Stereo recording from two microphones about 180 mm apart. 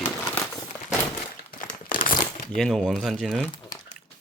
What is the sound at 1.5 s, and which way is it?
Crumpling, 45° left (ahead or behind).